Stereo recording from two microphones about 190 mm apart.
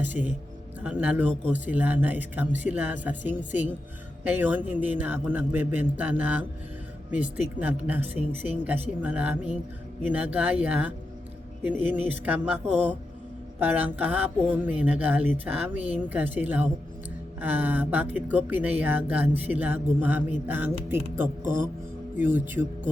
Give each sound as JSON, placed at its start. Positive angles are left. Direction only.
{"t": 0.0, "sound": "speech", "side_deg": -10}
{"t": 7.6, "sound": "speech", "side_deg": -10}
{"t": 13.6, "sound": "speech", "side_deg": -10}
{"t": 21.4, "sound": "speech", "side_deg": -45}
{"t": 22.2, "sound": "speech", "side_deg": -10}